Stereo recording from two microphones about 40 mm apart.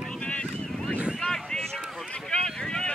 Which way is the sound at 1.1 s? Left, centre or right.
Centre.